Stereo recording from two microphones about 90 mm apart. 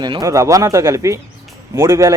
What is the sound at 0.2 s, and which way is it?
Speech, 35° right (ahead or behind).